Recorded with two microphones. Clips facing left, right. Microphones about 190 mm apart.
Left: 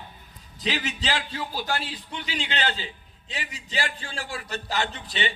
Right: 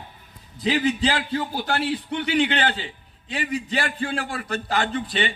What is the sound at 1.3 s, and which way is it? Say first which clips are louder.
A man's voice: right 5 dB; 60° right (ahead or behind).